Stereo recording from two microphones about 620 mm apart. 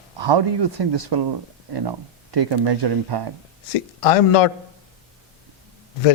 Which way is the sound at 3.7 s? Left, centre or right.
Left.